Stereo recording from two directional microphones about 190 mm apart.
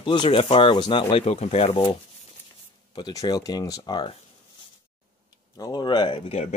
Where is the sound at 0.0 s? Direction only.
25° left (ahead or behind).